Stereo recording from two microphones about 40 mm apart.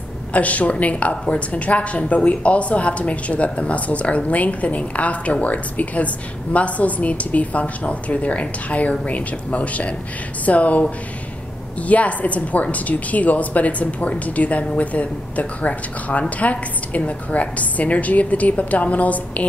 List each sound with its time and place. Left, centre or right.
0.3 s a woman's voice: left